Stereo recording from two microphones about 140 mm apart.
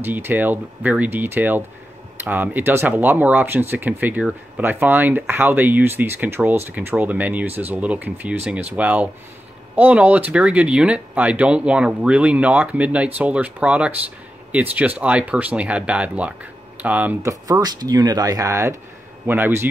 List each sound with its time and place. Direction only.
0.0 s speech: 15° right (ahead or behind)
17.2 s speech: 25° right (ahead or behind)